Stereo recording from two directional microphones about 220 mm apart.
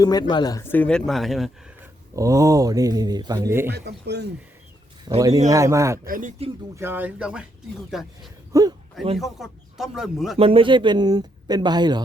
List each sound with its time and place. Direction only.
0.0 s speech: 20° left (ahead or behind); by 1.5 s centre (ahead or behind)
2.1 s speech: 15° right (ahead or behind)
3.7 s speech: 50° right (ahead or behind)
5.0 s speech: 15° right (ahead or behind)
6.1 s speech: 35° right (ahead or behind)
6.7 s a man's voice: 10° right (ahead or behind)
8.5 s speech: 15° right (ahead or behind)
9.1 s a man's voice: centre (ahead or behind)
10.3 s speech: 25° right (ahead or behind)